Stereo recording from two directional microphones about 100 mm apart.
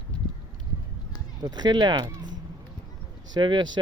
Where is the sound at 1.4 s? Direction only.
45° right (ahead or behind).